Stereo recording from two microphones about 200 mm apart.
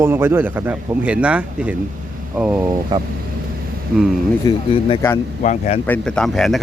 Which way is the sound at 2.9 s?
20° right (ahead or behind).